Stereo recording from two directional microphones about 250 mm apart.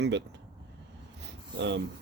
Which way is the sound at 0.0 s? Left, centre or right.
Right.